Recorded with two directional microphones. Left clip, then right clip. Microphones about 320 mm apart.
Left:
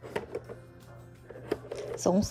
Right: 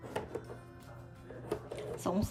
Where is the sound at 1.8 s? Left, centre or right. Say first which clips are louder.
Left 9 dB; centre.